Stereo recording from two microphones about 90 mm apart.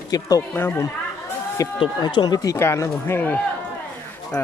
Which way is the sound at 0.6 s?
30° left (ahead or behind).